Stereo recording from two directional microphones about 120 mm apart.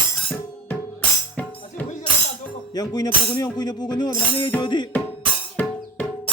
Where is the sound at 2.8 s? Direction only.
35° left (ahead or behind).